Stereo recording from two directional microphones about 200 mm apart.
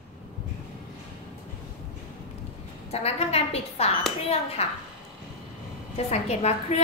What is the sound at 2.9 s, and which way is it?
A woman's voice, 30° left (ahead or behind).